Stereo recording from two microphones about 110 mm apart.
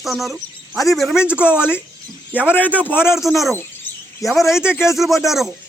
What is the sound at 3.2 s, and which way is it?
Speech, centre (ahead or behind).